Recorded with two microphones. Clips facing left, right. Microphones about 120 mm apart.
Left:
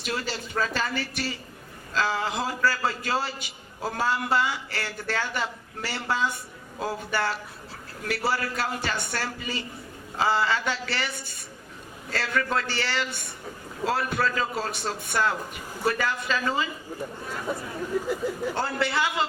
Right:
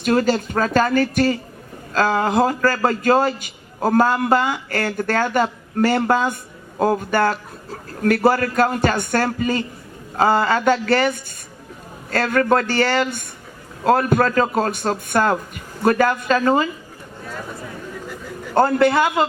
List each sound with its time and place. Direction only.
0.0 s a man's voice: 50° right (ahead or behind)
18.0 s a sound: 10° left (ahead or behind)
18.5 s a man's voice: 50° right (ahead or behind)